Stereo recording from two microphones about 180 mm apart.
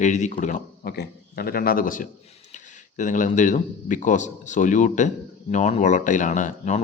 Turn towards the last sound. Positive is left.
turn(degrees=45)  # may be behind; listen again after turning